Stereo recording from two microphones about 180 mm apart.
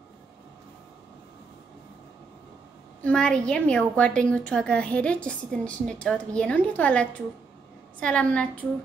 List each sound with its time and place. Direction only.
3.0 s a woman's voice: 5° left (ahead or behind)